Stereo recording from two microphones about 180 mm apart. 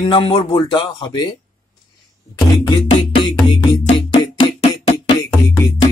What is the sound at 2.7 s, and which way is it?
Music, 25° left (ahead or behind).